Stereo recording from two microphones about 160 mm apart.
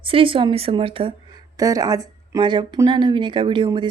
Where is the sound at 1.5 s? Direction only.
20° right (ahead or behind).